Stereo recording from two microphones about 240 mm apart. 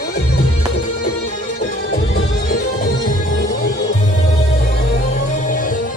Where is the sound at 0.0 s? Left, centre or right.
Left.